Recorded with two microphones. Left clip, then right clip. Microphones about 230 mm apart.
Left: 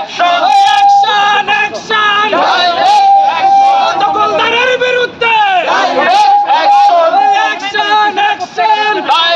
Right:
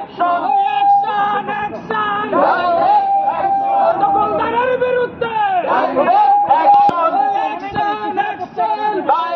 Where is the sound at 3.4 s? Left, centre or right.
Left.